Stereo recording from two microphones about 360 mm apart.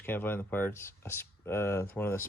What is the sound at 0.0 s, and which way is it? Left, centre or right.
Speech, centre.